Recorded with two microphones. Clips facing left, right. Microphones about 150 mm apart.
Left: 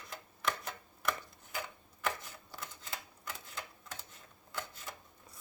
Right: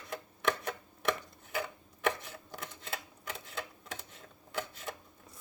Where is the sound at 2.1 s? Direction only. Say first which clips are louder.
Right 5 dB; 65° right (ahead or behind).